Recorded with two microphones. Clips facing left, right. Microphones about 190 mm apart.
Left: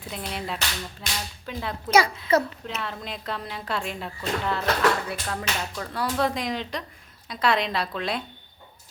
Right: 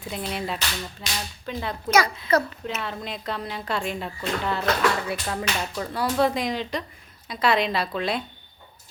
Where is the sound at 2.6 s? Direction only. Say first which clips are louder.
Right 2 dB; centre (ahead or behind).